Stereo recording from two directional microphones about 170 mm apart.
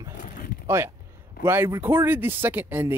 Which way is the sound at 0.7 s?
15° right (ahead or behind).